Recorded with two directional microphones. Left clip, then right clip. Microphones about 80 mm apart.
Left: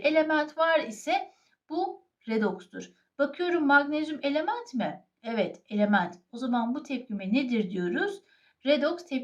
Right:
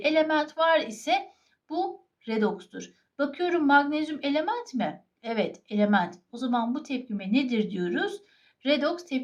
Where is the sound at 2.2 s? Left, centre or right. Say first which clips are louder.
Right 1 dB; right.